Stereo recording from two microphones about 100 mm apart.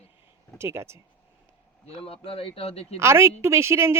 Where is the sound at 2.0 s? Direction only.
70° left (ahead or behind); by 3.0 s 90° left.